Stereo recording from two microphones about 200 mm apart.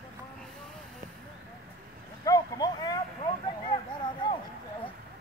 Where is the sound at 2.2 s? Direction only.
20° left (ahead or behind).